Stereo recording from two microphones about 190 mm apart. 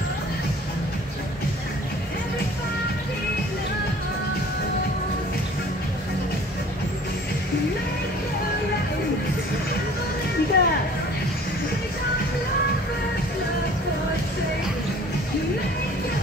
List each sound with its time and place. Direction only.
10.5 s music: 55° left (ahead or behind)